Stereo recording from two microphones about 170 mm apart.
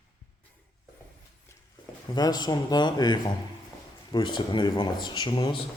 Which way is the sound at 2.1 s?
25° left (ahead or behind).